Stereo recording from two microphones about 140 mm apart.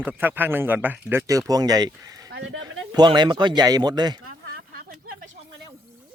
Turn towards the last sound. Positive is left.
turn(degrees=-90)